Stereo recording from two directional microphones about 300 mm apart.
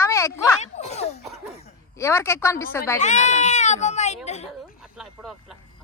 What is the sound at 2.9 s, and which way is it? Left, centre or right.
Speech, left.